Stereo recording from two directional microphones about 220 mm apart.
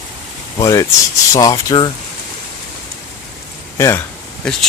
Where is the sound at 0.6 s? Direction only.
15° left (ahead or behind).